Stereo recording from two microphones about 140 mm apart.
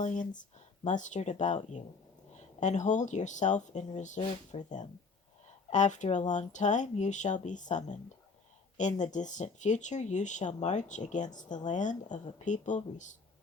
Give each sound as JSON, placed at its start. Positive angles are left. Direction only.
{"t": 0.0, "sound": "speech", "side_deg": 65}